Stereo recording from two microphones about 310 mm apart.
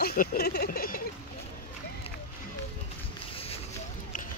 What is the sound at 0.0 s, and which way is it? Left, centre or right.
Speech, left.